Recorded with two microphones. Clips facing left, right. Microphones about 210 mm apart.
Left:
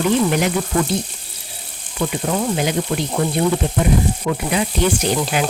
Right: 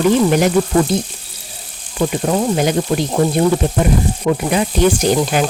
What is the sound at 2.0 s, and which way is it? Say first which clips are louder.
Speech: right 4 dB; 40° right (ahead or behind).